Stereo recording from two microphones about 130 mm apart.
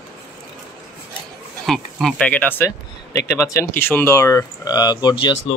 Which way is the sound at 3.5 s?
15° left (ahead or behind).